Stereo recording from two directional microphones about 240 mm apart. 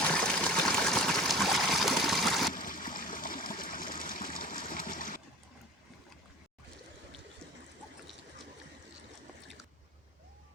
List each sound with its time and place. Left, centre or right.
0.1 s trickle: centre
2.5 s water: left